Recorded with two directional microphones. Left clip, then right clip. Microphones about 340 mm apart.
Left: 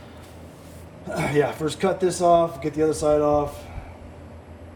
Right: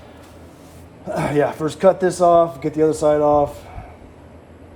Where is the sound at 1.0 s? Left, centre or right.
Centre.